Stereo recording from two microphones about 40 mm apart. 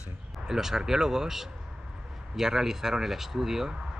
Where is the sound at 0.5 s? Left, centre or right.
Centre.